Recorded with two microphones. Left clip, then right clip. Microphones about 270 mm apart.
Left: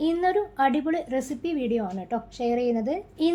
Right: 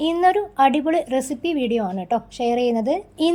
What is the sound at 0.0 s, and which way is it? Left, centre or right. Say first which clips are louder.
A woman's voice: right 6 dB; right.